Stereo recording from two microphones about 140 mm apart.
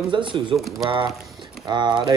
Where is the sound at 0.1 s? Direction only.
35° right (ahead or behind).